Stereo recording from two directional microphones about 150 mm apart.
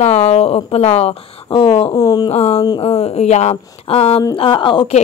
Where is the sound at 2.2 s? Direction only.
45° left (ahead or behind).